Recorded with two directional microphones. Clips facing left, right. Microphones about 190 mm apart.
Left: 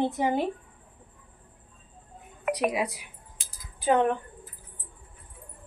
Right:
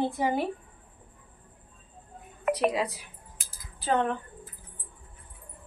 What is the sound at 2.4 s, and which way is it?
Speech, 10° left (ahead or behind).